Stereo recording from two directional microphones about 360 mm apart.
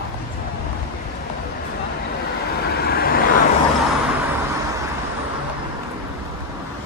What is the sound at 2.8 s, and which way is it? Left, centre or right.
Vehicle, left.